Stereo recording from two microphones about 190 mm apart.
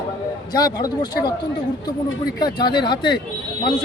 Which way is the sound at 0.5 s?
20° left (ahead or behind).